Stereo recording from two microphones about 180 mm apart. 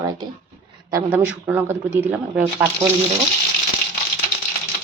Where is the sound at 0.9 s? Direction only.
10° right (ahead or behind).